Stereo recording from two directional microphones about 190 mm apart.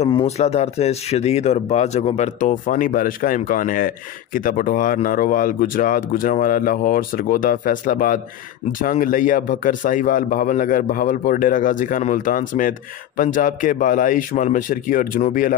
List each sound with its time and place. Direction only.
0.0 s speech: 30° left (ahead or behind); by 15.5 s 45° left (ahead or behind)